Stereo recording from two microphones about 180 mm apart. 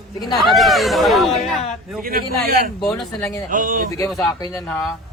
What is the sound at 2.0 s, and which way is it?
A man's voice, 55° right (ahead or behind).